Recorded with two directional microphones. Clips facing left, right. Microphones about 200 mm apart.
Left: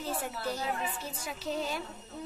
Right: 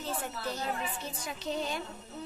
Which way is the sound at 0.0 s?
10° left (ahead or behind).